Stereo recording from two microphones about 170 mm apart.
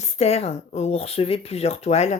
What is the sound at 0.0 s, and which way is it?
Speech, 40° left (ahead or behind).